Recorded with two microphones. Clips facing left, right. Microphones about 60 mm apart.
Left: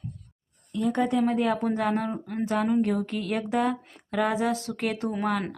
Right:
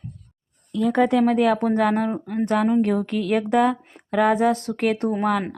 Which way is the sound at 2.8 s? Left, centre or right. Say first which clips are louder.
Right 5 dB; right.